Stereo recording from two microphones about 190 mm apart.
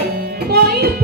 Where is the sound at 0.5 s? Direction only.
55° right (ahead or behind).